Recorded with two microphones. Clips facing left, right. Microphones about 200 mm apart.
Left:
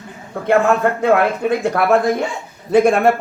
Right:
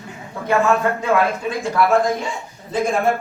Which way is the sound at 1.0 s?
60° left (ahead or behind).